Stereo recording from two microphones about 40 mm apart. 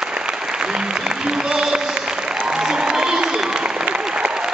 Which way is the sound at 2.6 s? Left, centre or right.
Centre.